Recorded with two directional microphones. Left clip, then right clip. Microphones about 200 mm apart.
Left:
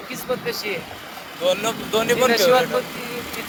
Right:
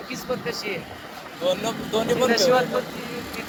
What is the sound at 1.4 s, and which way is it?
Speech, 40° left (ahead or behind).